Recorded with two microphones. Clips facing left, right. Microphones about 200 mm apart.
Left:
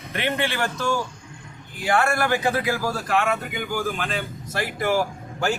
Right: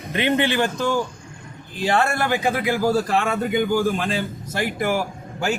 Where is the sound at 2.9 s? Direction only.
30° right (ahead or behind).